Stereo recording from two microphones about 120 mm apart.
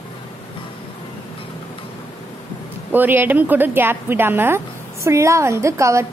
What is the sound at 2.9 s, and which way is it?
A woman's voice, 15° right (ahead or behind).